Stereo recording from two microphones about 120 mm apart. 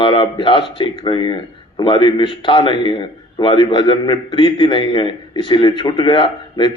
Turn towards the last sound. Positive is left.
turn(degrees=40)  # may be behind; listen again after turning